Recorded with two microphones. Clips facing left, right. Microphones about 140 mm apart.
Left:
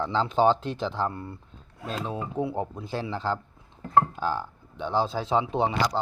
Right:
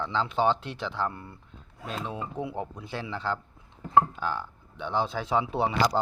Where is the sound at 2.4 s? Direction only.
30° left (ahead or behind).